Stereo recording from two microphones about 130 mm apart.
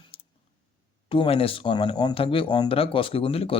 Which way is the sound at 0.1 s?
45° left (ahead or behind).